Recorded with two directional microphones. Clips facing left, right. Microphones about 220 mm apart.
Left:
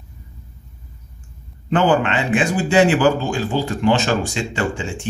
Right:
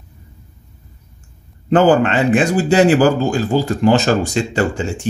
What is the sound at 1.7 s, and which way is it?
A man's voice, 40° right (ahead or behind).